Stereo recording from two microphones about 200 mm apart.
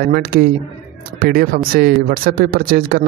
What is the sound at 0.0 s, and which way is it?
Speech, 50° right (ahead or behind).